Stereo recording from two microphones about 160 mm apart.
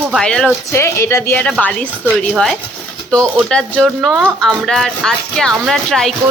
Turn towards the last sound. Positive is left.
turn(degrees=0)  # may be behind; listen again after turning